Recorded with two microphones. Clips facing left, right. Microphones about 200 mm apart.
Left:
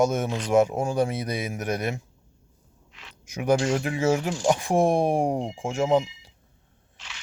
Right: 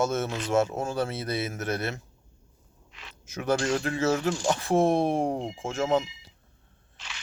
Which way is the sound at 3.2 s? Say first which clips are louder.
Left 4 dB; 15° left (ahead or behind).